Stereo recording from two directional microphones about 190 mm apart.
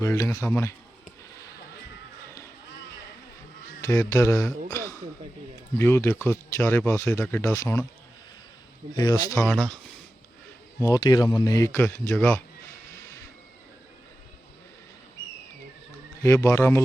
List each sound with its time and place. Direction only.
0.0 s speech: 15° left (ahead or behind)
3.8 s speech: 15° left (ahead or behind)
4.7 s a sound: 15° left (ahead or behind)
5.7 s speech: 10° left (ahead or behind)
9.0 s speech: 20° left (ahead or behind)
9.4 s speech: 5° left (ahead or behind)
10.8 s speech: 20° left (ahead or behind)
16.2 s speech: 15° left (ahead or behind)